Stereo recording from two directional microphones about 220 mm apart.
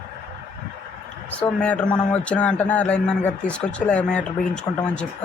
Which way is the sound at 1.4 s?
5° left (ahead or behind).